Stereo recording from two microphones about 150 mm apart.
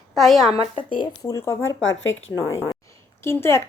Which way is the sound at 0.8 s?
35° left (ahead or behind).